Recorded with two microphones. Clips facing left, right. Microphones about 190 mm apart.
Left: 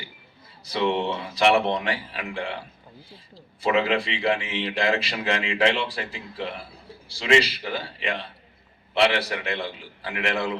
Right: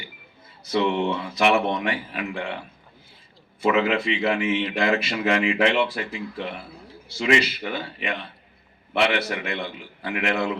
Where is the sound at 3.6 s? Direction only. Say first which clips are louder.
Right 2 dB; 30° left (ahead or behind).